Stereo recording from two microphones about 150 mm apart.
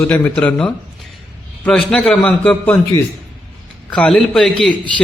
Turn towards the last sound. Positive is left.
turn(degrees=5)  # may be behind; listen again after turning